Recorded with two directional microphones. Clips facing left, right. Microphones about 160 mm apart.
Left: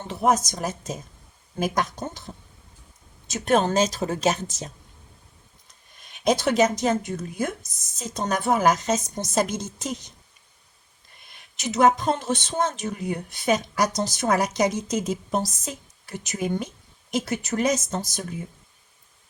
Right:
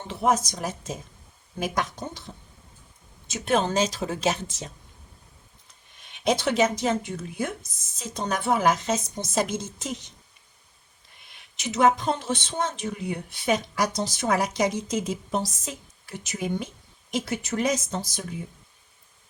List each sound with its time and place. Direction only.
0.1 s speech: 40° left (ahead or behind)
3.2 s speech: 45° left (ahead or behind)
6.0 s speech: 40° left (ahead or behind)
11.3 s speech: 45° left (ahead or behind)